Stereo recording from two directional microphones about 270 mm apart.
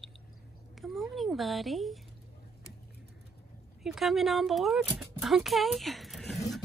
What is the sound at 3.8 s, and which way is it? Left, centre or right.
Speech, centre.